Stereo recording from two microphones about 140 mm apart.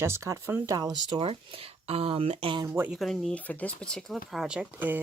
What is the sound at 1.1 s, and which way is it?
Speech, 40° right (ahead or behind).